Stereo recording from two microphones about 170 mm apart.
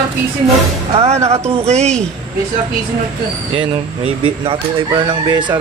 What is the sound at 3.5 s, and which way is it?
Speech, 30° right (ahead or behind).